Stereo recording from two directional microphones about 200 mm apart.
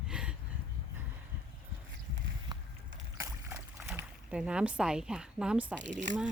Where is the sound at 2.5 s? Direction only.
20° right (ahead or behind).